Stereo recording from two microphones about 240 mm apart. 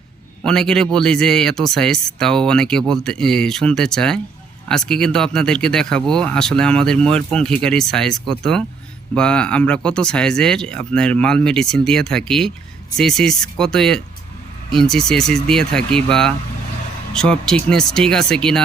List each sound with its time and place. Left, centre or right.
0.4 s speech: centre